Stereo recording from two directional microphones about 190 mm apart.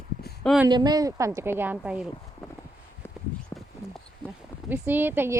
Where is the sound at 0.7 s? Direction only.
20° right (ahead or behind); by 2.1 s 5° right (ahead or behind).